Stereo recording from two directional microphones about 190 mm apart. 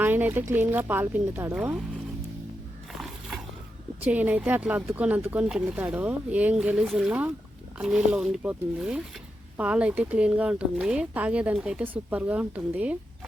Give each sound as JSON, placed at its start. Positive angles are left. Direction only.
{"t": 0.0, "sound": "a sound", "side_deg": -10}
{"t": 0.5, "sound": "speech", "side_deg": -10}
{"t": 3.0, "sound": "biting", "side_deg": 0}
{"t": 4.0, "sound": "speech", "side_deg": -10}